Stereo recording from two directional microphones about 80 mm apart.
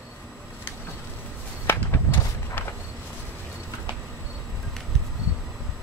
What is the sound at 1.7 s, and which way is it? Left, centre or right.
Walk, left.